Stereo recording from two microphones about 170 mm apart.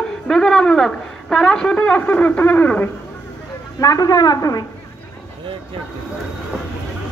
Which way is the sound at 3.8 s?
20° left (ahead or behind).